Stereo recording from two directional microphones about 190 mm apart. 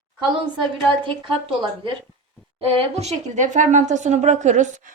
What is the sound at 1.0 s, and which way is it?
A woman's voice, 25° right (ahead or behind).